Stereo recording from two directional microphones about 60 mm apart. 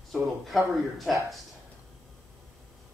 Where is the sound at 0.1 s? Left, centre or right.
Centre.